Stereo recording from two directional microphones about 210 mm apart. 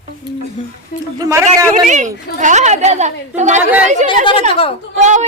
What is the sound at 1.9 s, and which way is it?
A woman's voice, 35° right (ahead or behind).